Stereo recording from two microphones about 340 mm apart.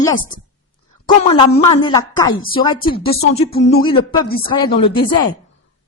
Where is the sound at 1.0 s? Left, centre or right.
Centre.